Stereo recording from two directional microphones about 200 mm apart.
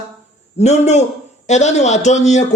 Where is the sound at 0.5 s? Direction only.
35° left (ahead or behind).